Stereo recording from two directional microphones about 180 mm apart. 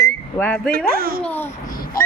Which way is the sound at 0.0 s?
10° left (ahead or behind).